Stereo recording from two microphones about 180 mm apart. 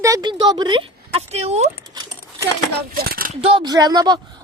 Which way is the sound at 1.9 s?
20° right (ahead or behind).